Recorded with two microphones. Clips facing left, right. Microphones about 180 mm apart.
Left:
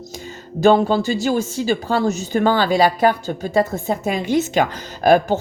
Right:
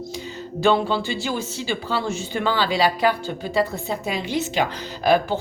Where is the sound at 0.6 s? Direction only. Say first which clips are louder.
Left 5 dB; 45° left (ahead or behind).